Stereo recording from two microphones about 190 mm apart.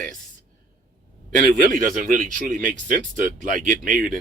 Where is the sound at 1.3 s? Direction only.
45° right (ahead or behind).